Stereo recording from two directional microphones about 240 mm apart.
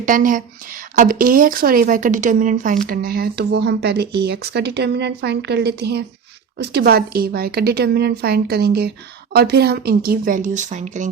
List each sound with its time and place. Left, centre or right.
0.0 s speech: right